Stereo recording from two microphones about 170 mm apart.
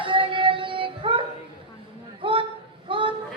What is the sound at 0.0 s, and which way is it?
Child singing, 30° right (ahead or behind).